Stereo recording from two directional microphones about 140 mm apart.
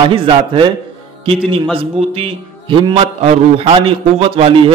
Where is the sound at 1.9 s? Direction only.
45° right (ahead or behind).